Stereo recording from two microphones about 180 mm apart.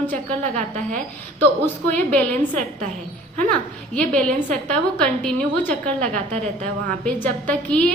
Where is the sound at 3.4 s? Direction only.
5° left (ahead or behind).